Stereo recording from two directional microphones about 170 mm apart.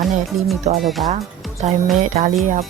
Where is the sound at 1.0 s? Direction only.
40° right (ahead or behind).